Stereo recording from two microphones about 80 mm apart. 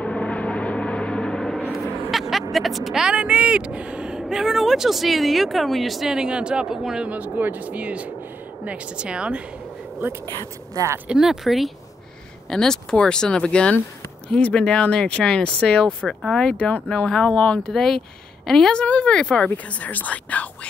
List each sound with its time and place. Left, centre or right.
0.0 s gong: centre
2.0 s a sound: centre
2.5 s speech: centre
7.1 s a woman's voice: right
10.7 s speech: right
11.1 s speech: centre